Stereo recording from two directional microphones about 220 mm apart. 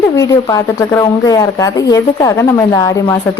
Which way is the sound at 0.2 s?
15° left (ahead or behind).